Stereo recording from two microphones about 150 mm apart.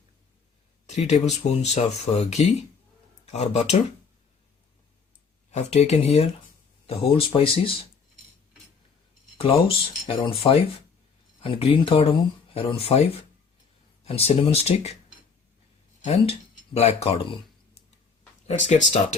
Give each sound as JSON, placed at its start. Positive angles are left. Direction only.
{"t": 0.9, "sound": "a sound", "side_deg": 45}
{"t": 1.2, "sound": "speech", "side_deg": 45}
{"t": 5.5, "sound": "speech", "side_deg": 50}
{"t": 9.4, "sound": "speech", "side_deg": 40}
{"t": 16.7, "sound": "speech", "side_deg": 40}
{"t": 18.4, "sound": "speech", "side_deg": 50}